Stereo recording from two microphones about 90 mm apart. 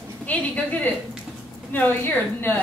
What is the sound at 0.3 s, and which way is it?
A woman's voice, 15° left (ahead or behind).